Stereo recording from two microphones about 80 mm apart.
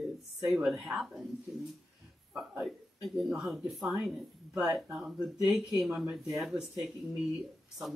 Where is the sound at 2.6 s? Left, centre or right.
Centre.